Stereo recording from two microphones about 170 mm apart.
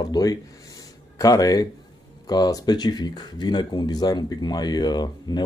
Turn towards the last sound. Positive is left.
turn(degrees=25)  # may be behind; listen again after turning